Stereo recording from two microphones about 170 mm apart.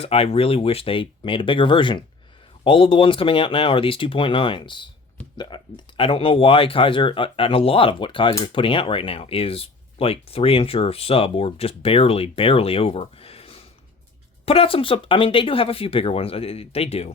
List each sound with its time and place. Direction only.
0.0 s speech: 35° left (ahead or behind)